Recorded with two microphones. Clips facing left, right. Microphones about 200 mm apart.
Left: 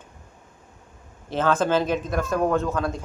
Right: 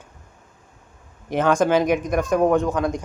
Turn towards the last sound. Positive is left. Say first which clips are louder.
# right 3 dB
turn(degrees=-15)  # may be behind; listen again after turning